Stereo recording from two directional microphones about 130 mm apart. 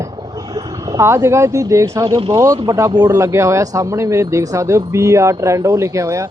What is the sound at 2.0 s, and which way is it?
Speech, 35° right (ahead or behind).